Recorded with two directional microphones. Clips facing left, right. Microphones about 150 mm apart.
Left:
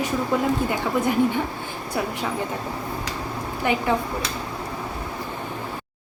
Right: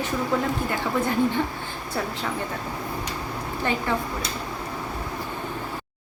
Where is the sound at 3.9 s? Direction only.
15° left (ahead or behind).